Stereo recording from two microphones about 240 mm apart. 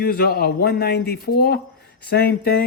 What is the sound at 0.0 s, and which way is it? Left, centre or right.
Speech, left.